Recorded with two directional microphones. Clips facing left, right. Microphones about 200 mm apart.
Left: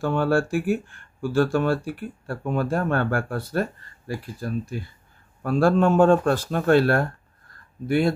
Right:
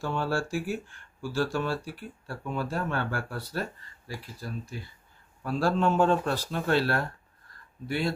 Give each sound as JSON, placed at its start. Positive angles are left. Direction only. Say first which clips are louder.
{"t": 0.0, "sound": "speech", "louder": "left 8 dB", "side_deg": 55}